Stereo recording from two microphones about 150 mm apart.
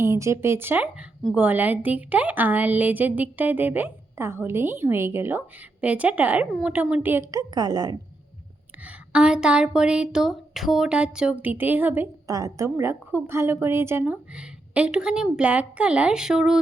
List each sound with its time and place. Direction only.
0.0 s a woman's voice: 20° right (ahead or behind)
8.8 s a woman's voice: 5° right (ahead or behind)
12.3 s a woman's voice: 25° right (ahead or behind); by 16.6 s 5° right (ahead or behind)